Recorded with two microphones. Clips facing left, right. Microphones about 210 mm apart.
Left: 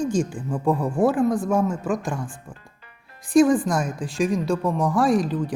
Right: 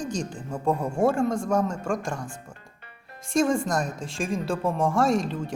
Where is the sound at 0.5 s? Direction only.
25° right (ahead or behind).